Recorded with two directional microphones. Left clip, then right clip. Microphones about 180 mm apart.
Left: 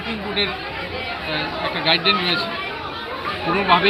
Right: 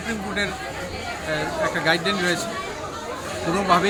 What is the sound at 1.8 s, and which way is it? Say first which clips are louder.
Speech: left 6 dB; 60° right (ahead or behind).